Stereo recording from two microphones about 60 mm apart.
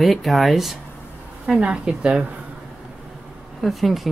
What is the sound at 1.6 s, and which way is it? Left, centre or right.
Speech, centre.